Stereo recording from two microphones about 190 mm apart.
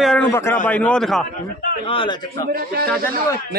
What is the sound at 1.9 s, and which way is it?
Speech, 25° left (ahead or behind).